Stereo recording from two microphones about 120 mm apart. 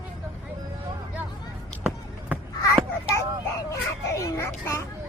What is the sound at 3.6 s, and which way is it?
Children playing, 25° left (ahead or behind).